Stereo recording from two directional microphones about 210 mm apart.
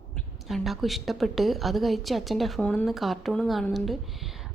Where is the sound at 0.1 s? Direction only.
Centre (ahead or behind).